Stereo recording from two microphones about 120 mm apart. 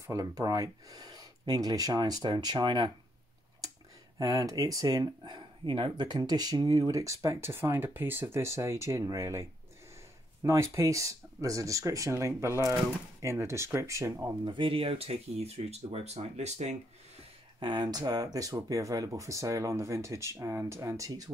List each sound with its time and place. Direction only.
0.0 s speech: 25° right (ahead or behind)
4.2 s speech: 30° right (ahead or behind)
14.4 s speech: 45° right (ahead or behind); by 16.7 s 65° right (ahead or behind)
17.6 s speech: 40° right (ahead or behind)